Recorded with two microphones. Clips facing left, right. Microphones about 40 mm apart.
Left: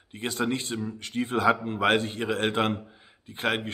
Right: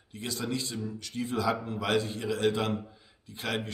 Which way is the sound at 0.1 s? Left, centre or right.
Left.